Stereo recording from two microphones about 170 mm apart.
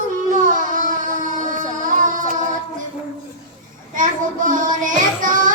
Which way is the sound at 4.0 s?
50° right (ahead or behind).